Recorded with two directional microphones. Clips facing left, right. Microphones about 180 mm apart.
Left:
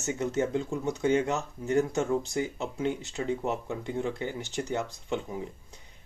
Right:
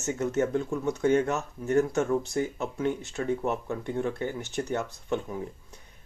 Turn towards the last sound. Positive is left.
turn(degrees=15)  # may be behind; listen again after turning